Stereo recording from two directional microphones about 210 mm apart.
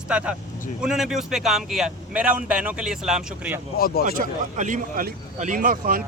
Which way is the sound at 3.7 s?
45° left (ahead or behind).